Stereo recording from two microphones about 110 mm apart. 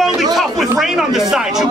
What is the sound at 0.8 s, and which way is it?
Speech, 5° right (ahead or behind).